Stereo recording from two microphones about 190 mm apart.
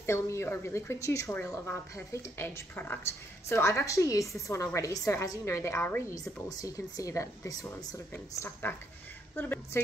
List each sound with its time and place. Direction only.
0.0 s a woman's voice: 15° left (ahead or behind)